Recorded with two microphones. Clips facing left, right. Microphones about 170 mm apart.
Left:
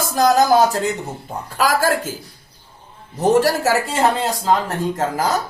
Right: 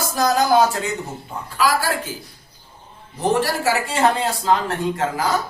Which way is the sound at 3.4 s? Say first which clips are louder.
Left 3 dB; 45° left (ahead or behind).